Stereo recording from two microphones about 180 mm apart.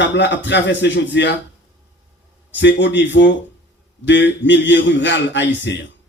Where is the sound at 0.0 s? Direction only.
80° left.